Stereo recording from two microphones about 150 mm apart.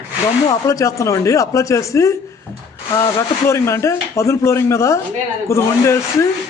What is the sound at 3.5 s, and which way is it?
A man's voice, 20° left (ahead or behind).